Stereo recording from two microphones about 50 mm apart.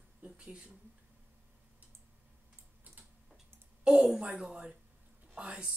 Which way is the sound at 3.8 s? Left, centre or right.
Centre.